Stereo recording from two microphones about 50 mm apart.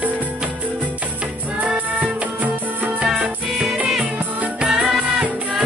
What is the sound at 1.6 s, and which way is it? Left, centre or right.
Music, right.